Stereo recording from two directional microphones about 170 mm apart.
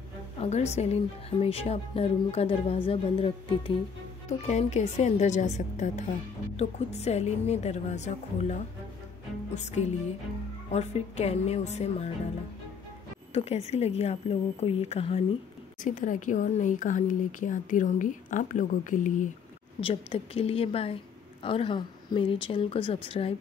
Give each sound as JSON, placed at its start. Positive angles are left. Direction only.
{"t": 0.4, "sound": "a woman's voice", "side_deg": 40}
{"t": 13.3, "sound": "a woman's voice", "side_deg": 35}
{"t": 15.8, "sound": "speech", "side_deg": 50}
{"t": 19.8, "sound": "a woman's voice", "side_deg": 35}